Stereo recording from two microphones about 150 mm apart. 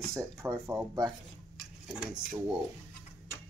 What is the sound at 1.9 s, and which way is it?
Speech, 5° right (ahead or behind).